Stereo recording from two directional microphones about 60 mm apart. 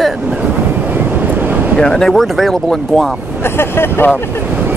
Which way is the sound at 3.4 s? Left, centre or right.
Left.